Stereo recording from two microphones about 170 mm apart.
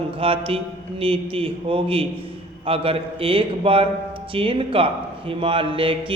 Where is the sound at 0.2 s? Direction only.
30° right (ahead or behind).